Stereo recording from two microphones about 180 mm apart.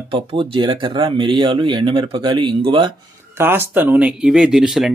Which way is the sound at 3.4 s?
10° right (ahead or behind).